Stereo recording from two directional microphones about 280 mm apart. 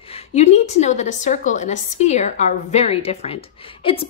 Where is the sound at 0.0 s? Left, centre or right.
Left.